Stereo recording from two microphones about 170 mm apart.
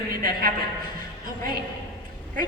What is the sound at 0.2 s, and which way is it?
Speech, 60° right (ahead or behind).